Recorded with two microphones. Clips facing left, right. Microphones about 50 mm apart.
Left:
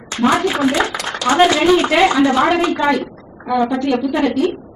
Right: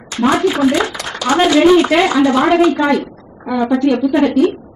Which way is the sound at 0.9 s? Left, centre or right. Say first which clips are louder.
Even; centre.